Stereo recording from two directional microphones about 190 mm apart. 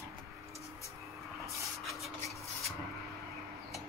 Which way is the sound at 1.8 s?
Centre (ahead or behind).